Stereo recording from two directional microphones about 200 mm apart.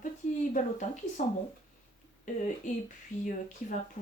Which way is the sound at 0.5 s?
40° left (ahead or behind).